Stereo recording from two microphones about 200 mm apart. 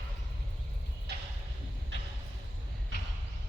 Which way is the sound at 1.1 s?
55° right (ahead or behind).